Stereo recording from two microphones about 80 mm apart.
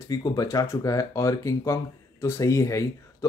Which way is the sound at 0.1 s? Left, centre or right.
Left.